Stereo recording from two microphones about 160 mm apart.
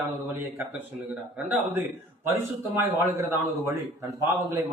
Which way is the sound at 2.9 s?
15° right (ahead or behind).